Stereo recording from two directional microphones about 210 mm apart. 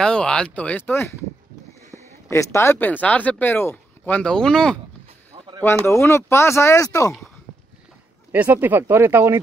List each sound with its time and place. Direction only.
0.0 s speech: 5° left (ahead or behind)
5.9 s speech: 15° left (ahead or behind)
8.3 s speech: 10° right (ahead or behind)